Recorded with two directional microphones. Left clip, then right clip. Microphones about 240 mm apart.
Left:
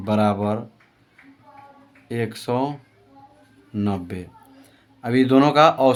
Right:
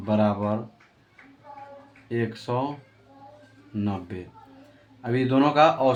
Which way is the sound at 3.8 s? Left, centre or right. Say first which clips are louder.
Left 4 dB; left.